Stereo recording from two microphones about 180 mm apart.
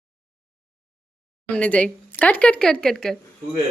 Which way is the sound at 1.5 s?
10° left (ahead or behind).